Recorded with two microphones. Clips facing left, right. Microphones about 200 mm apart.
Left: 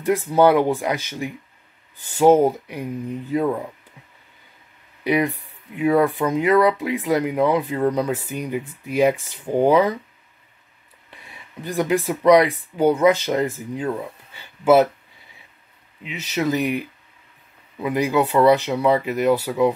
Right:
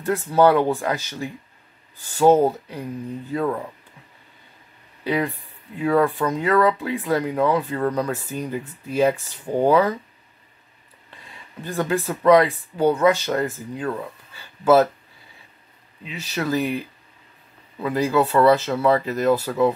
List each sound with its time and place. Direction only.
0.0 s speech: 15° left (ahead or behind)
5.0 s speech: 15° left (ahead or behind)
11.1 s speech: 15° left (ahead or behind)
16.0 s speech: 20° left (ahead or behind)